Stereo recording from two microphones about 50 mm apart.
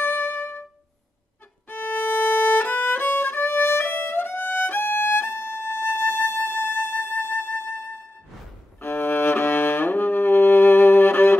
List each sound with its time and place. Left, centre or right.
0.0 s music: left
1.7 s violin: left
8.8 s music: left